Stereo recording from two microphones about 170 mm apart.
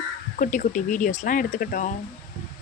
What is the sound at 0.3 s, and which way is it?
Speech, 50° left (ahead or behind).